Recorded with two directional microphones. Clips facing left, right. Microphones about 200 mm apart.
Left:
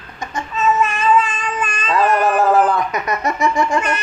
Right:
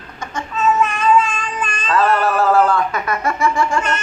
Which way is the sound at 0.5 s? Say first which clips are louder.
Even; centre (ahead or behind).